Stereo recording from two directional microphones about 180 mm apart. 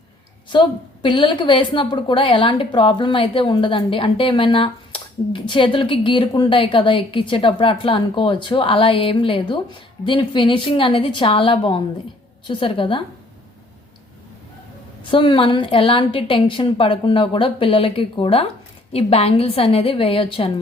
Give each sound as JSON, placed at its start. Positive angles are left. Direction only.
{"t": 0.5, "sound": "a woman's voice", "side_deg": 25}
{"t": 15.1, "sound": "a woman's voice", "side_deg": 30}